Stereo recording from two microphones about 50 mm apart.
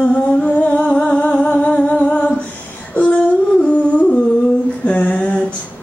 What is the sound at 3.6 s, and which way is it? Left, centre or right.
Music, left.